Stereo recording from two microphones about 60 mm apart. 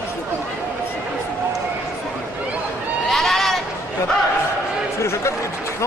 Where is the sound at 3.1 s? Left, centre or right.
Centre.